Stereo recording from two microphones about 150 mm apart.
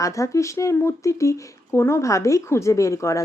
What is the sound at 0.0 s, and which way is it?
Speech, 20° left (ahead or behind).